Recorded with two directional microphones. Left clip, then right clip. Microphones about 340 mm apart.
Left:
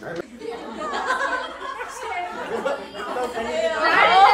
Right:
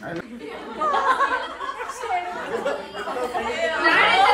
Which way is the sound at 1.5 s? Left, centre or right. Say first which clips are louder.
Right 1 dB; centre.